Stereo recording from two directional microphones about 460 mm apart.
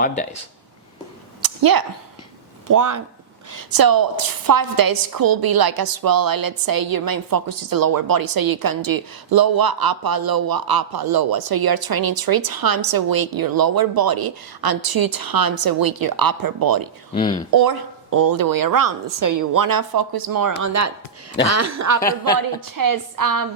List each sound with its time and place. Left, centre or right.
1.4 s a sound: right
2.6 s a woman's voice: right
17.2 s speech: centre
17.5 s a woman's voice: right
20.6 s a woman's voice: right